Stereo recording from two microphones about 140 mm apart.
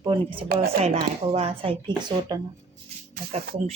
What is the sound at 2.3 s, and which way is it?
Speech, 30° right (ahead or behind).